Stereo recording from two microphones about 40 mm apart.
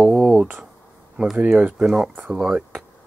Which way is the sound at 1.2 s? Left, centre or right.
Right.